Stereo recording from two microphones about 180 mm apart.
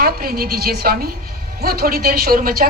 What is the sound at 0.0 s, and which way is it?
A woman's voice, 55° right (ahead or behind).